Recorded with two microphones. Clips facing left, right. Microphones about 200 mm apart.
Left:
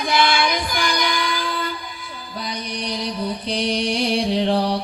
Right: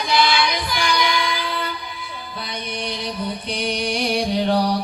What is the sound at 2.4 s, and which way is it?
Music, 40° left (ahead or behind).